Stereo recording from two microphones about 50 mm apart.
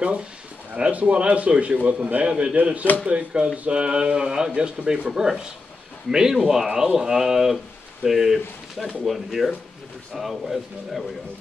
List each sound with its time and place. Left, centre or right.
0.7 s a man's voice: right; by 11.1 s centre